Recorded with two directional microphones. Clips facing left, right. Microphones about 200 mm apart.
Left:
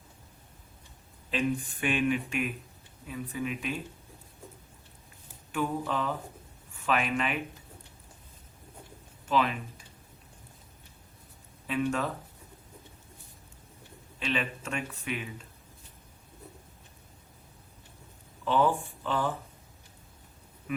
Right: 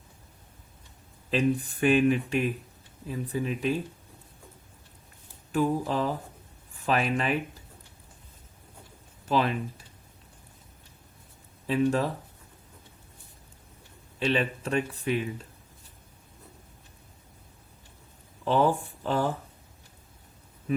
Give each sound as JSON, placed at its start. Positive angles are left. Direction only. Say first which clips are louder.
{"t": 1.3, "sound": "speech", "louder": "right 4 dB", "side_deg": -40}
{"t": 5.5, "sound": "speech", "louder": "right 5 dB", "side_deg": -35}
{"t": 9.3, "sound": "speech", "louder": "right 2 dB", "side_deg": -35}
{"t": 11.6, "sound": "speech", "louder": "right 5 dB", "side_deg": -35}
{"t": 14.2, "sound": "speech", "louder": "right 6 dB", "side_deg": -35}
{"t": 18.4, "sound": "speech", "louder": "right 2 dB", "side_deg": -40}
{"t": 20.7, "sound": "a sound", "louder": "right 6 dB", "side_deg": -35}